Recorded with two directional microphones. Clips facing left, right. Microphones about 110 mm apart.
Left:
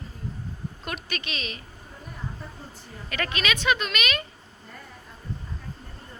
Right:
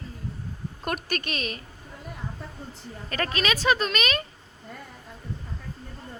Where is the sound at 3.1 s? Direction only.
35° right (ahead or behind).